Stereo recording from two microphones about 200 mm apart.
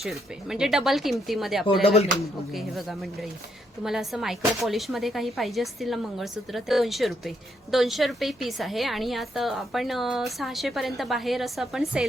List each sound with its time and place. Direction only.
0.0 s speech: centre (ahead or behind)
1.6 s speech: 25° left (ahead or behind)
2.5 s speech: centre (ahead or behind)